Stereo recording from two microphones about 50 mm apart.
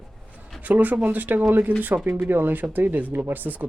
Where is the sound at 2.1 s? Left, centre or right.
Right.